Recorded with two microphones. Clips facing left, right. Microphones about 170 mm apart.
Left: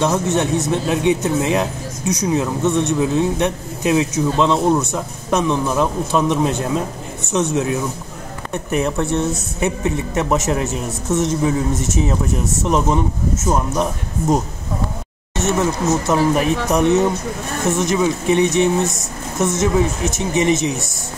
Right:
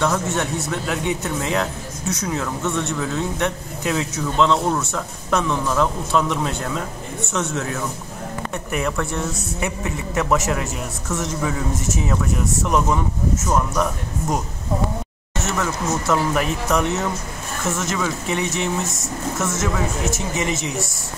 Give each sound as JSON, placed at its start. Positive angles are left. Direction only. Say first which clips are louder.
{"t": 0.0, "sound": "speech", "louder": "left 4 dB", "side_deg": 20}